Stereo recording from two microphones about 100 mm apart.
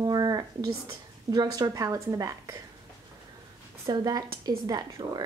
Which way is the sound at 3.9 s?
40° right (ahead or behind).